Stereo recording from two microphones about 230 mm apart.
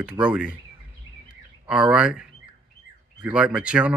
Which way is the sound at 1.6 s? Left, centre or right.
Centre.